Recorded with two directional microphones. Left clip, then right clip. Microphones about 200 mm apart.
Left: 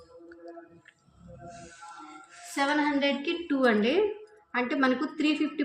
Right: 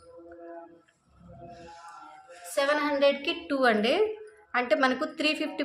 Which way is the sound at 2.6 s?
35° right (ahead or behind).